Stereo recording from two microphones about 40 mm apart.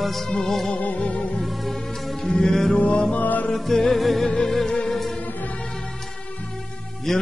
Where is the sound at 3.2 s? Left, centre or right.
Left.